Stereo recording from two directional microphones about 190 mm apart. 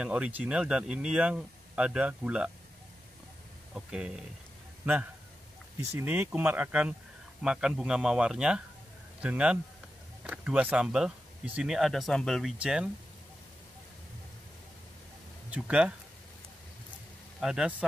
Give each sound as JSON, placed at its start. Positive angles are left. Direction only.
{"t": 0.0, "sound": "speech", "side_deg": -5}
{"t": 3.7, "sound": "speech", "side_deg": -5}
{"t": 5.9, "sound": "speech", "side_deg": -10}
{"t": 15.5, "sound": "speech", "side_deg": -5}
{"t": 17.4, "sound": "speech", "side_deg": -5}